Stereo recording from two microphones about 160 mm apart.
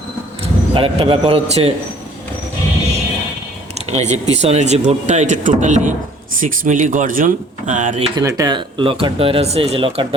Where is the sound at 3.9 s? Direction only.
45° right (ahead or behind).